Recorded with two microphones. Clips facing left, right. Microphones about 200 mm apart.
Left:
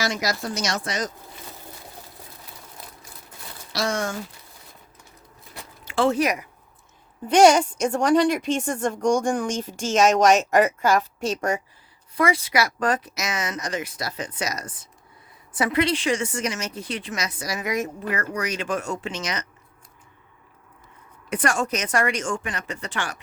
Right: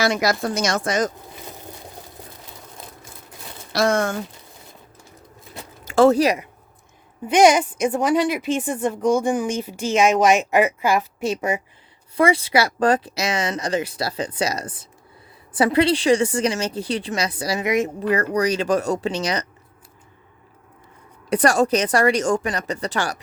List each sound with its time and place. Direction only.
0.0 s a woman's voice: 60° right (ahead or behind)
3.7 s a woman's voice: 55° right (ahead or behind)
5.8 s speech: 45° right (ahead or behind)
7.3 s a woman's voice: 10° right (ahead or behind)
12.1 s a woman's voice: 30° right (ahead or behind)
21.2 s a woman's voice: 35° right (ahead or behind)